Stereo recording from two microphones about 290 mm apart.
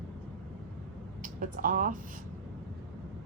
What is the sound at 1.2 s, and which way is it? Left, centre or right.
Speech, right.